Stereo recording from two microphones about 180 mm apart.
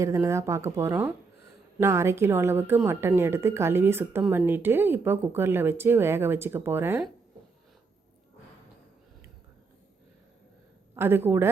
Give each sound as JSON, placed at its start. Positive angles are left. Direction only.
{"t": 0.0, "sound": "a woman's voice", "side_deg": -15}
{"t": 10.9, "sound": "a woman's voice", "side_deg": -10}